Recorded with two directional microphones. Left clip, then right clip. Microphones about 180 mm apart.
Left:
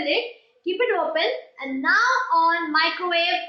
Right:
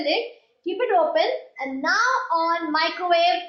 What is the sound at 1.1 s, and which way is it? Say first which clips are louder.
A woman's voice: right 2 dB; 65° right (ahead or behind).